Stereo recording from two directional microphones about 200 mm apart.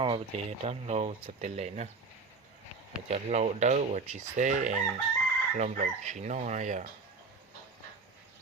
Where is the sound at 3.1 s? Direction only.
35° right (ahead or behind).